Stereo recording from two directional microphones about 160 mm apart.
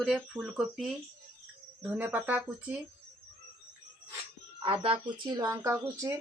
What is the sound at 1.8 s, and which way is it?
Speech, 10° right (ahead or behind).